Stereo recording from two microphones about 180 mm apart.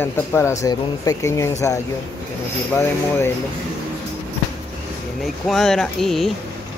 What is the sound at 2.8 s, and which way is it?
Speech, 15° left (ahead or behind).